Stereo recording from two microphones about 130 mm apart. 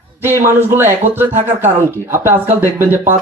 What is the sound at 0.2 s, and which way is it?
A man's voice, 20° right (ahead or behind).